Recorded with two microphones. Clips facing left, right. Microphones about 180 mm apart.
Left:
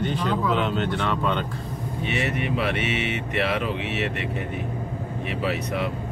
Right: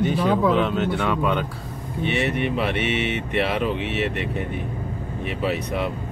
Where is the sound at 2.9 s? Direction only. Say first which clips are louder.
Right 3 dB; centre (ahead or behind).